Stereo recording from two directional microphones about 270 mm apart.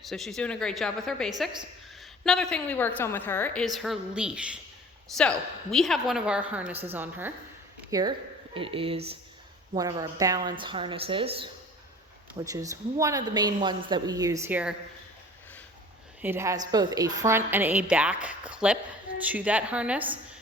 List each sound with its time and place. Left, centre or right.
0.0 s a woman's voice: centre
12.5 s a woman's voice: centre
16.2 s a woman's voice: centre